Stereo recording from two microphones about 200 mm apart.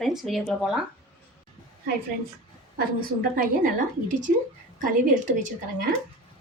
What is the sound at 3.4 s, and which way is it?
Speech, 40° right (ahead or behind).